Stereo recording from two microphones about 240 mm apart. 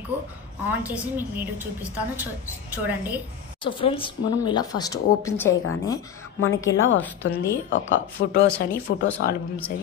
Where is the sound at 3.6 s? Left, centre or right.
Left.